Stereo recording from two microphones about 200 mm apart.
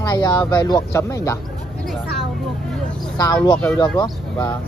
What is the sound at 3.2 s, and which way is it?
Speech, 20° left (ahead or behind).